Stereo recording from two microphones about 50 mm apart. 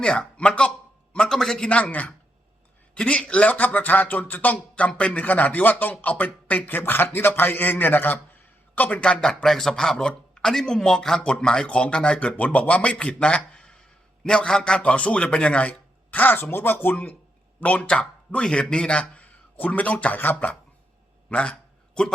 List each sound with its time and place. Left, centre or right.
0.0 s a man's voice: centre
1.3 s speech: centre
1.8 s speech: left
2.9 s speech: left
9.0 s a man's voice: centre; by 20.6 s left
21.2 s a sound: left